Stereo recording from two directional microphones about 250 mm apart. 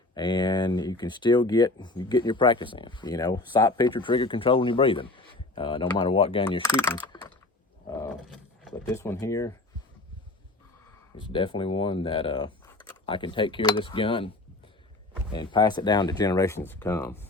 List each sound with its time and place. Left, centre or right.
0.1 s speech: centre
7.9 s wild animals: centre
8.7 s speech: centre
11.2 s speech: centre
15.3 s speech: centre